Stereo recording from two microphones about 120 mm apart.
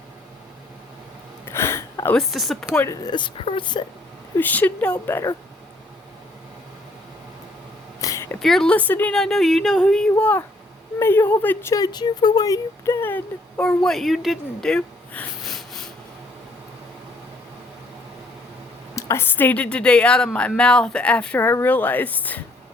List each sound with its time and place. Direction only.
1.5 s a sound: 20° left (ahead or behind)
2.1 s speech: centre (ahead or behind)
2.7 s speech: 25° left (ahead or behind)
4.4 s speech: 15° left (ahead or behind)
8.0 s a sound: 25° left (ahead or behind)
8.4 s speech: 5° left (ahead or behind)
9.1 s speech: 5° left (ahead or behind)
15.4 s snort: centre (ahead or behind)
18.9 s speech: 25° left (ahead or behind)